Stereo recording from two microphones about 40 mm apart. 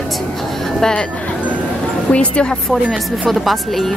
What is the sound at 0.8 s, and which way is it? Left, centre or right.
Speech, centre.